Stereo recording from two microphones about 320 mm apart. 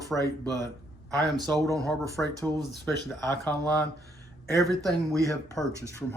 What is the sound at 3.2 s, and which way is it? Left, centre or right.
Speech, centre.